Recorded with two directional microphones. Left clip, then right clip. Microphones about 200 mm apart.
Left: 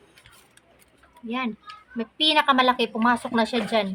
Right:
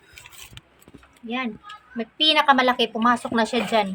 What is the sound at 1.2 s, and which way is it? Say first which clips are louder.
A woman's voice: right 1 dB; 5° left (ahead or behind).